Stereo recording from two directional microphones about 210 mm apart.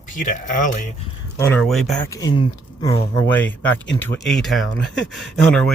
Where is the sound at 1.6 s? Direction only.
Centre (ahead or behind).